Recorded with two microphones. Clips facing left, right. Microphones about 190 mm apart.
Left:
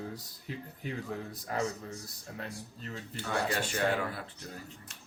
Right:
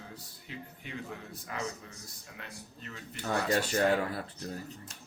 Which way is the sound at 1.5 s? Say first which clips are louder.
Left 5 dB; 40° left (ahead or behind).